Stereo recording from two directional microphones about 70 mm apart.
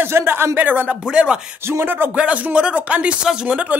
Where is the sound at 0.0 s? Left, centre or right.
Right.